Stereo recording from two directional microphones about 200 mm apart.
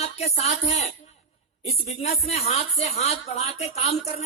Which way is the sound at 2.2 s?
30° left (ahead or behind).